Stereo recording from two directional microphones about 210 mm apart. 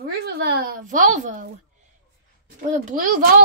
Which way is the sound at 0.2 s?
50° right (ahead or behind).